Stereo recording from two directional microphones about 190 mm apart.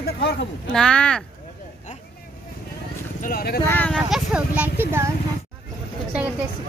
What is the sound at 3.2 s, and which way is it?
Speech, 50° left (ahead or behind).